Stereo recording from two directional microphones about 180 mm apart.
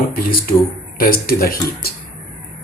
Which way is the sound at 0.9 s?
55° left (ahead or behind).